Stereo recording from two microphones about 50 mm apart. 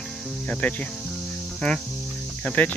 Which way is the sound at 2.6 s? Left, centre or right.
Left.